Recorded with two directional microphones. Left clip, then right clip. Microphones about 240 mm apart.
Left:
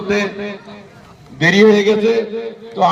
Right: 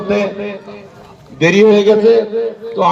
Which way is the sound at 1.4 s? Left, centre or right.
Left.